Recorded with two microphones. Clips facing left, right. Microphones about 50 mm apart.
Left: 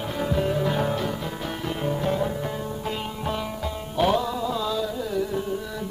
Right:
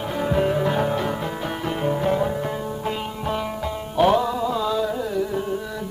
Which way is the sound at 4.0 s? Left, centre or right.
Right.